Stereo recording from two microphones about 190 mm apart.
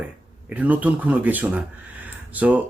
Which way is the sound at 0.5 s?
10° right (ahead or behind).